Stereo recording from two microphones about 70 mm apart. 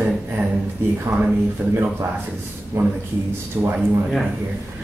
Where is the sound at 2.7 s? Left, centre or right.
Right.